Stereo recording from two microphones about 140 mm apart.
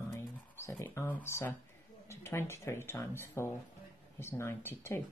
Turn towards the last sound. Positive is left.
turn(degrees=15)  # may be behind; listen again after turning